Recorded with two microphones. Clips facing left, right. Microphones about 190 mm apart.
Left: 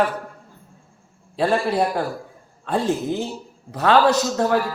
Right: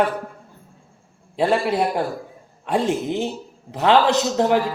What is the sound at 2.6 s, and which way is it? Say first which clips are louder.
A woman's voice: right 1 dB; 15° right (ahead or behind).